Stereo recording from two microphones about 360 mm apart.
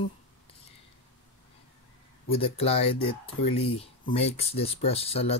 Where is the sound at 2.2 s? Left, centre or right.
Centre.